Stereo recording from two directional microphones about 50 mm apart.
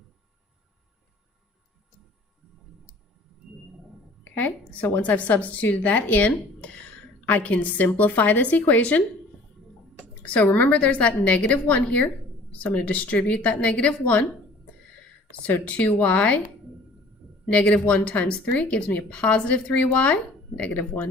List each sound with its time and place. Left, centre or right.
4.2 s a woman's voice: left
10.2 s a woman's voice: left
15.4 s a woman's voice: left
17.5 s a woman's voice: left